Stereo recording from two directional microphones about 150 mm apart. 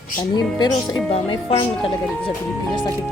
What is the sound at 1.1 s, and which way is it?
Speech, 35° left (ahead or behind).